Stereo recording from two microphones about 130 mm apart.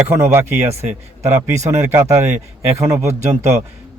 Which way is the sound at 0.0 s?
20° right (ahead or behind).